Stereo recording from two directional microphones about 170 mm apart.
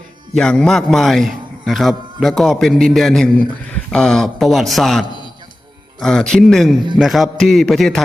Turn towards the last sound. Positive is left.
turn(degrees=0)  # may be behind; listen again after turning